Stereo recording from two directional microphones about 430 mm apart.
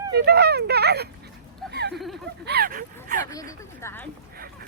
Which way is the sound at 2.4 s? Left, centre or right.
Right.